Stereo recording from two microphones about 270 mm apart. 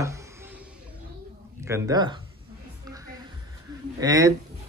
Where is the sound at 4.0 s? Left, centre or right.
Centre.